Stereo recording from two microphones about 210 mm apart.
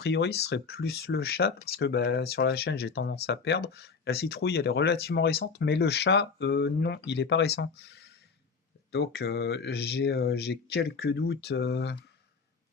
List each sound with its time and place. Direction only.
0.0 s speech: 50° left (ahead or behind)